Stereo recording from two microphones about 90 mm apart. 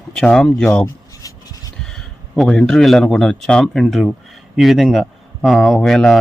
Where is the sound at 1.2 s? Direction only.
45° left (ahead or behind).